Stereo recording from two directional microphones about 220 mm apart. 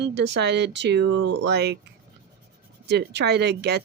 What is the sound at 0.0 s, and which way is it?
Speech, 50° right (ahead or behind).